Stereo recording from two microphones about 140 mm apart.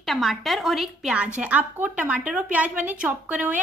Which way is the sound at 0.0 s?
Centre (ahead or behind).